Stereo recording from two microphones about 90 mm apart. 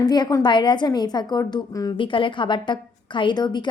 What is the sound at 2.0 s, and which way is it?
A woman's voice, 70° left (ahead or behind).